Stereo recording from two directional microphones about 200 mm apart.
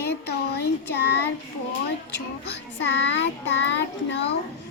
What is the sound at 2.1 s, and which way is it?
Child singing, 60° left (ahead or behind).